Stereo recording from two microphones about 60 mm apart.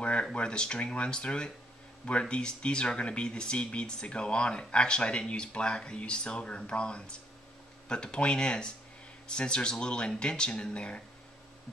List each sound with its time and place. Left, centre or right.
0.0 s speech: centre